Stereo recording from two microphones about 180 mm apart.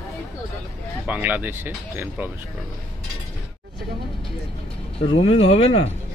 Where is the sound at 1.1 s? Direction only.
10° right (ahead or behind).